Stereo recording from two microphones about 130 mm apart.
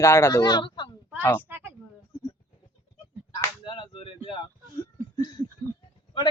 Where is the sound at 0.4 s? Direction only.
35° left (ahead or behind).